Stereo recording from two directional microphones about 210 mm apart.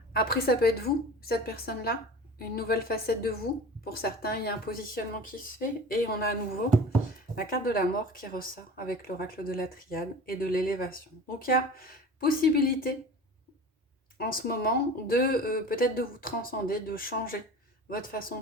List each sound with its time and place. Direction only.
0.1 s speech: 45° left (ahead or behind)
7.3 s speech: 45° left (ahead or behind)
14.2 s speech: 45° left (ahead or behind)